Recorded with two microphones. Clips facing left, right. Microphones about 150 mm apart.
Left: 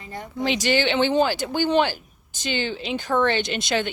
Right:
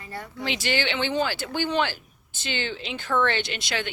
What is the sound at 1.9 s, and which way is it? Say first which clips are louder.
Speech: left 4 dB; 15° left (ahead or behind).